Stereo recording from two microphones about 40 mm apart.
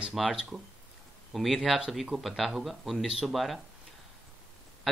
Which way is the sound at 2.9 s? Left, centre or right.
Right.